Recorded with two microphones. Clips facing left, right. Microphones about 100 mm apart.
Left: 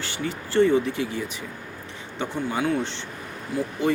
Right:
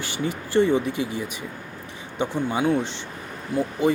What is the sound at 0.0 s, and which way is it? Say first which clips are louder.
Speech: right 2 dB; 15° right (ahead or behind).